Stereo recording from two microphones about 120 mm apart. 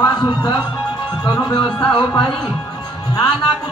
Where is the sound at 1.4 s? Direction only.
40° left (ahead or behind).